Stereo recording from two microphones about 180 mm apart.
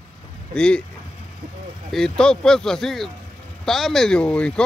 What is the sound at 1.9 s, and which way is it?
Speech, 5° left (ahead or behind).